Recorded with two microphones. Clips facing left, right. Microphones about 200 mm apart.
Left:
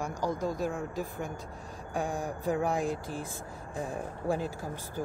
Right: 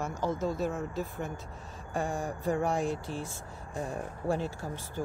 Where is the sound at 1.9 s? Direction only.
Centre (ahead or behind).